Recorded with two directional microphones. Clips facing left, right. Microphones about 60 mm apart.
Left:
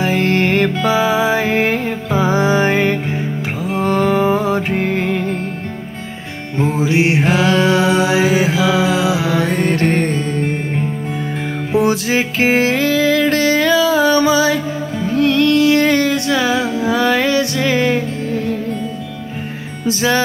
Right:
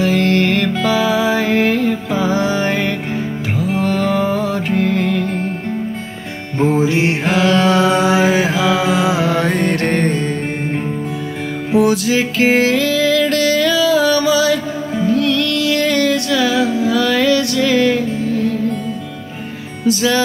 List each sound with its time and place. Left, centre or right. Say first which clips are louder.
0.0 s music: right 1 dB; left
6.9 s music: left 2 dB; centre
7.7 s music: right 1 dB; right
8.7 s mantra: even; right
11.7 s music: right 1 dB; left
19.9 s music: right 1 dB; left